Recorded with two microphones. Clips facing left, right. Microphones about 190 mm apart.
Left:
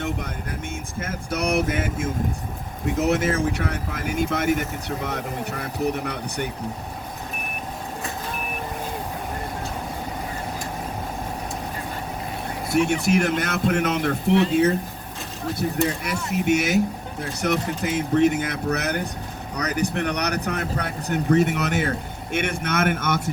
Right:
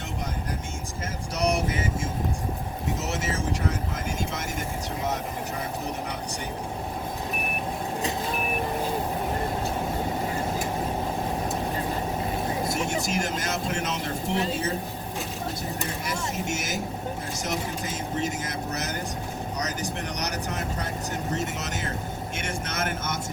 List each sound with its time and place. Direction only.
1.0 s speech: 55° left (ahead or behind)
12.7 s speech: 65° left (ahead or behind)
16.0 s speech: 65° left (ahead or behind)